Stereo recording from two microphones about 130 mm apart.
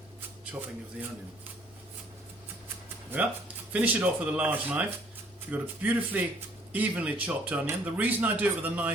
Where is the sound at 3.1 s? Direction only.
15° right (ahead or behind).